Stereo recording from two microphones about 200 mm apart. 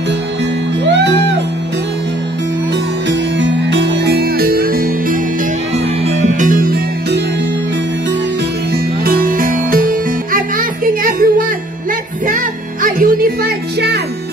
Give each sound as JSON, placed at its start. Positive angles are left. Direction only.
{"t": 0.8, "sound": "music", "side_deg": -60}
{"t": 3.1, "sound": "music", "side_deg": -65}
{"t": 8.7, "sound": "music", "side_deg": -45}
{"t": 12.8, "sound": "music", "side_deg": -45}